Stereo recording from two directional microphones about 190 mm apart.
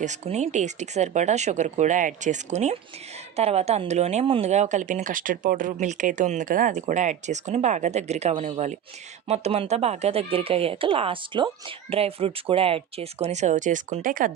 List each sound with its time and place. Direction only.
0.0 s speech: 35° right (ahead or behind)